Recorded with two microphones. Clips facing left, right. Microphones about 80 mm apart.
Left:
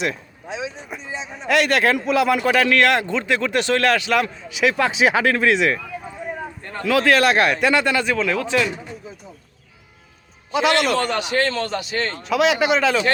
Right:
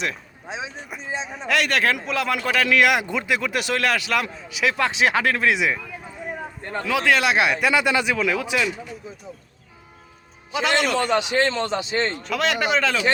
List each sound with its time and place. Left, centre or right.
0.4 s a sound: right
0.9 s a man's voice: centre
2.6 s a man's voice: centre
6.6 s a man's voice: right
6.9 s a man's voice: centre
7.9 s speech: centre
10.5 s a man's voice: centre
10.9 s a man's voice: centre
12.2 s a man's voice: centre